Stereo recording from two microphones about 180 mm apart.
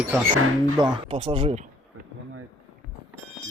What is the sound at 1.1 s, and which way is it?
Speech, 35° right (ahead or behind).